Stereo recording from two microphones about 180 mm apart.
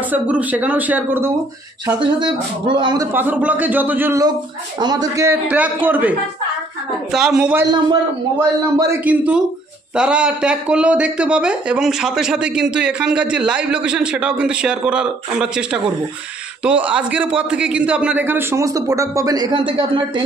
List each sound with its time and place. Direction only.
0.1 s a man's voice: 10° right (ahead or behind)
2.0 s a man's voice: 25° right (ahead or behind)
3.1 s a man's voice: 10° right (ahead or behind)
7.9 s a man's voice: 20° right (ahead or behind)